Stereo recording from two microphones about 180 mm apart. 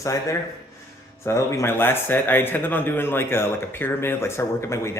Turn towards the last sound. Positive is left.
turn(degrees=15)  # may be behind; listen again after turning